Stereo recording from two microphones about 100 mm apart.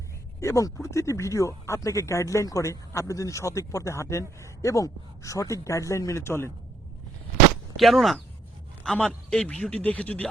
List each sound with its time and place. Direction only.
0.3 s speech: 30° left (ahead or behind)
7.8 s a man's voice: centre (ahead or behind)